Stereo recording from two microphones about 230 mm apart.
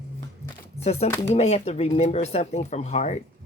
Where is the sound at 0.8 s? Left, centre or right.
Left.